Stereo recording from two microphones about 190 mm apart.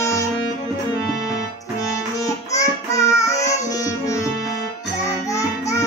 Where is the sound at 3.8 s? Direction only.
15° left (ahead or behind).